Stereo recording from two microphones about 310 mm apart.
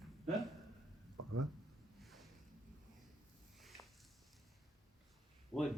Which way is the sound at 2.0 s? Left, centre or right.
Centre.